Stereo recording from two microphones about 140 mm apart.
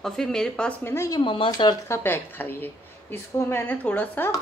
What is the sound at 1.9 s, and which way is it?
A woman's voice, 15° left (ahead or behind).